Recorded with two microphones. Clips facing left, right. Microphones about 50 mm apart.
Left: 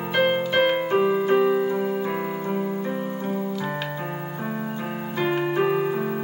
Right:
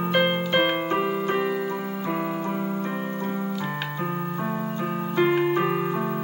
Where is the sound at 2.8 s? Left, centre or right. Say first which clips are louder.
Left 1 dB; centre.